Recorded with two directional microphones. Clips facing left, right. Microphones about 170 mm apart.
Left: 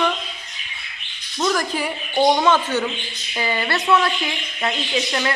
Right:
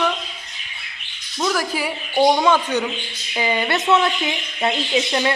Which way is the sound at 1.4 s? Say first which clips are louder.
Even; 10° right (ahead or behind).